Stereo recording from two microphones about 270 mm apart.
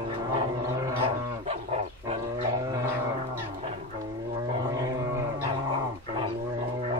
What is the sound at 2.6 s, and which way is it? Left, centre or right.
Music, centre.